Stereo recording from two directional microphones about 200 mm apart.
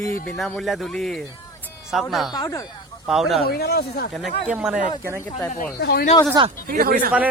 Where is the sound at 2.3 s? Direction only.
15° left (ahead or behind).